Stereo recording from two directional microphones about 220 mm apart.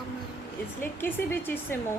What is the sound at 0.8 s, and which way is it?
Speech, 10° left (ahead or behind).